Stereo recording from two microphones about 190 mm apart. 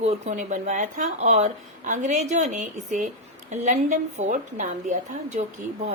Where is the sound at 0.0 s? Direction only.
35° right (ahead or behind).